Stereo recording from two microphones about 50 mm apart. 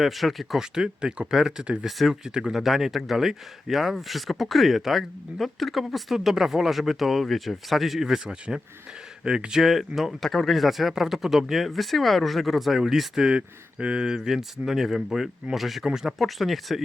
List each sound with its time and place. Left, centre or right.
0.0 s speech: centre
0.6 s speech: centre
9.6 s speech: centre
13.3 s speech: right; by 16.8 s centre